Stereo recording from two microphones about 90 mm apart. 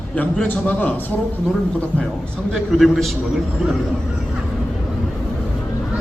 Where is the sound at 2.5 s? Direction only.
Centre (ahead or behind).